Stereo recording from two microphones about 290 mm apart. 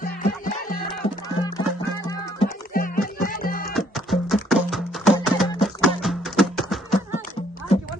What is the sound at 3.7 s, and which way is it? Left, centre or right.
Music, centre.